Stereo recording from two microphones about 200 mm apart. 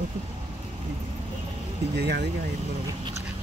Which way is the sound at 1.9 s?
55° right (ahead or behind).